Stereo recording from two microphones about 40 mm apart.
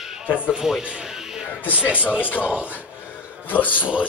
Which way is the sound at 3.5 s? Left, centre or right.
Left.